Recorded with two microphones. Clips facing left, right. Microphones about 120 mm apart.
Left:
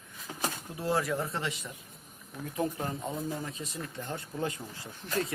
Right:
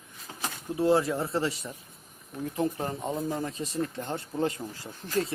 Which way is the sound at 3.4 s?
40° right (ahead or behind).